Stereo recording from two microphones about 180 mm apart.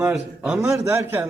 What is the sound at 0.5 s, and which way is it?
Speech, 15° right (ahead or behind).